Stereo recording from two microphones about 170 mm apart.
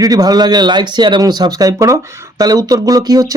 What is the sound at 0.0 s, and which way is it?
Speech, 20° right (ahead or behind).